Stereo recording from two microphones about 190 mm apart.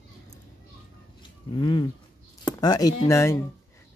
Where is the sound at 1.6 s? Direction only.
25° left (ahead or behind).